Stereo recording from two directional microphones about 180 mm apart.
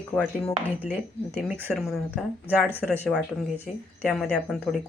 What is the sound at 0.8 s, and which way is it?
Speech, 10° right (ahead or behind).